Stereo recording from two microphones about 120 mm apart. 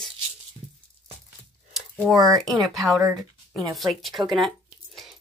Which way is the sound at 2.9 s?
30° right (ahead or behind).